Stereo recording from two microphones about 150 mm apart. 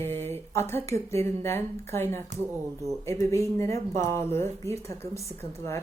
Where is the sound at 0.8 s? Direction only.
45° right (ahead or behind).